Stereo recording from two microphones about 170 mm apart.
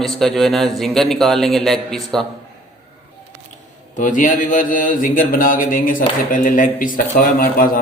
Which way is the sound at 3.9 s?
50° left (ahead or behind).